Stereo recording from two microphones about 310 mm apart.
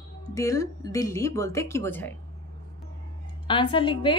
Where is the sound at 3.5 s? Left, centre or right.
Centre.